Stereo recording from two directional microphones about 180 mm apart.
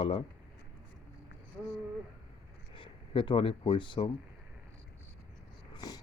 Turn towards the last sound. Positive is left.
turn(degrees=20)  # may be behind; listen again after turning